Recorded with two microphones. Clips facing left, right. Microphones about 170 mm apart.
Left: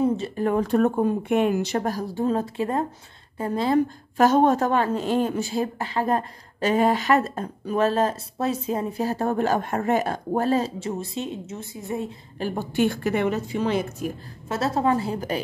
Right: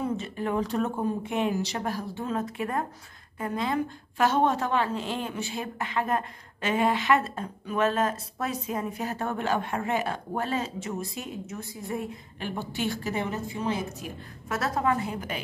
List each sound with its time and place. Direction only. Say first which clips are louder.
0.4 s a woman's voice: left 7 dB; 50° left (ahead or behind); by 12.2 s 25° left (ahead or behind)
12.4 s a woman's voice: left 9 dB; 45° left (ahead or behind); by 14.0 s 70° left (ahead or behind)
14.5 s a woman's voice: left 4 dB; 30° left (ahead or behind)